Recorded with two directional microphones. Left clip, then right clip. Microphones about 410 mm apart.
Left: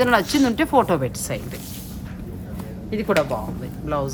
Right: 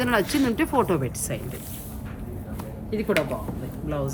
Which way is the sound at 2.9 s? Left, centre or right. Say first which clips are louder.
Left 3 dB; centre.